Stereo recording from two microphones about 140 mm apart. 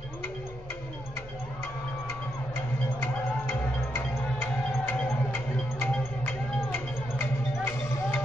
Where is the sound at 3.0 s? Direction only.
15° left (ahead or behind).